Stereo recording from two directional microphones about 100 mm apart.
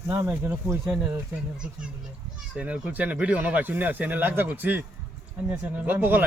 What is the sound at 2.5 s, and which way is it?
Speech, 10° right (ahead or behind).